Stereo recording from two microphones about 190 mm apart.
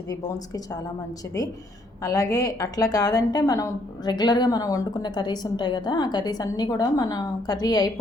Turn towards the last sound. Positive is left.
turn(degrees=20)  # may be behind; listen again after turning